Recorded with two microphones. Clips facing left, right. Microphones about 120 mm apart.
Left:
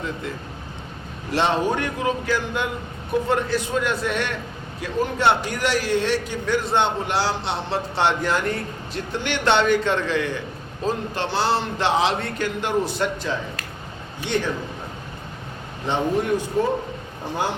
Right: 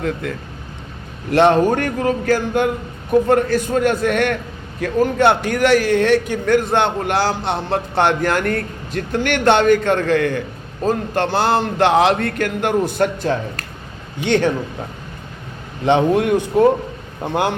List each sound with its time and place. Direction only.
0.0 s a man's voice: 60° right (ahead or behind)
14.3 s speech: 75° right (ahead or behind)
15.9 s speech: 75° right (ahead or behind)
17.2 s speech: 60° right (ahead or behind)